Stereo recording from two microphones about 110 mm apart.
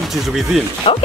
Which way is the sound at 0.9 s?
50° left (ahead or behind).